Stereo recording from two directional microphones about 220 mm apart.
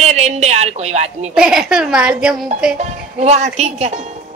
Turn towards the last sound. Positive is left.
turn(degrees=-30)  # may be behind; listen again after turning